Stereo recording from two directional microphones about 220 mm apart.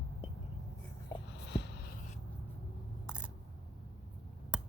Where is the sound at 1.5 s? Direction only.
50° left (ahead or behind).